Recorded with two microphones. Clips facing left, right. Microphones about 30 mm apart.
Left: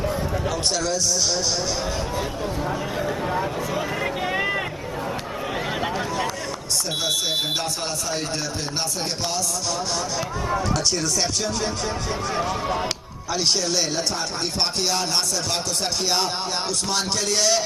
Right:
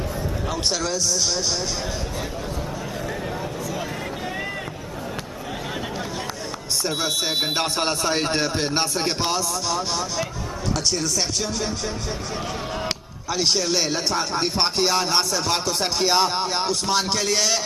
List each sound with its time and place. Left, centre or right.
7.5 s speech: right
13.3 s speech: centre